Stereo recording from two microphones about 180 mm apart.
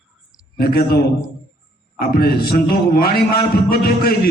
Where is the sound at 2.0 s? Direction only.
55° left (ahead or behind).